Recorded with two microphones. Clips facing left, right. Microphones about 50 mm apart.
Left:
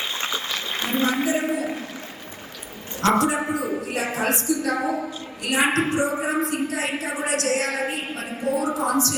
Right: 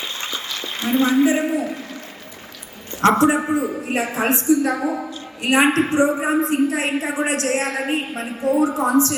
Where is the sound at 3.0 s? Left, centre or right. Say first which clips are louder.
Right 5 dB; right.